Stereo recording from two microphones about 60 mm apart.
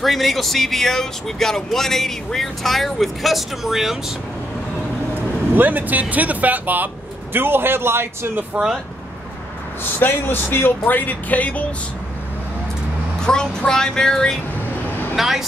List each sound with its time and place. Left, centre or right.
0.0 s speech: centre
5.6 s a man's voice: right
9.9 s speech: left
13.2 s speech: centre
15.1 s speech: centre